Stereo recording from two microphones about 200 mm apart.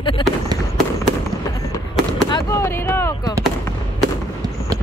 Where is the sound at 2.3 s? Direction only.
15° left (ahead or behind).